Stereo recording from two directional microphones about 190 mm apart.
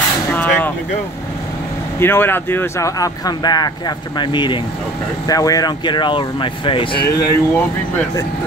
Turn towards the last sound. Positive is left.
turn(degrees=20)  # may be behind; listen again after turning